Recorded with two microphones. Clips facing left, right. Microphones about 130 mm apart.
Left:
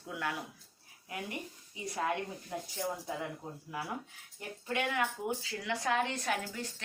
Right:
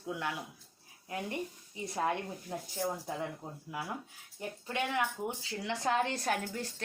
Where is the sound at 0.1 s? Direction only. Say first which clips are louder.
Right 1 dB; 20° right (ahead or behind).